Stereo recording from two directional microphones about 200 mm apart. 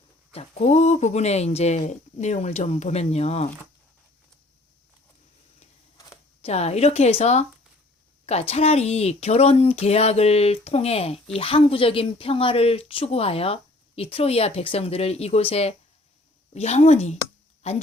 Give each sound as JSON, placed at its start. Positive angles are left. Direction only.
{"t": 0.3, "sound": "speech", "side_deg": 35}
{"t": 6.4, "sound": "speech", "side_deg": 30}